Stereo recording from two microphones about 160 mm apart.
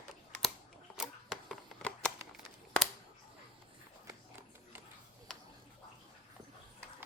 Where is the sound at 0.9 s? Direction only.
5° right (ahead or behind).